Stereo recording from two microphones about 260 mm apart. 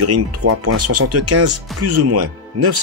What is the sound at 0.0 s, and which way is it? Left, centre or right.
Speech, right.